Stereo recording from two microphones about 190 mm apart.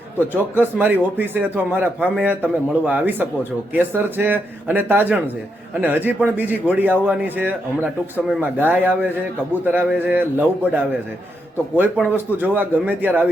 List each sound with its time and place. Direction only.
0.5 s a man's voice: 10° right (ahead or behind)
11.8 s a man's voice: 10° right (ahead or behind)